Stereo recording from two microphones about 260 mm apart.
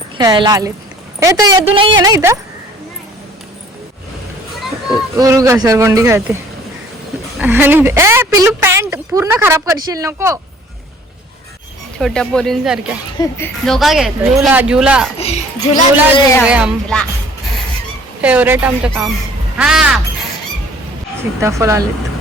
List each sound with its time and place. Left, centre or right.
0.2 s a woman's voice: centre
5.1 s a woman's voice: centre
7.3 s a woman's voice: centre
11.9 s speech: centre
13.1 s speech: centre
15.2 s a woman's voice: left
16.4 s speech: centre
18.2 s speech: centre
21.4 s a woman's voice: centre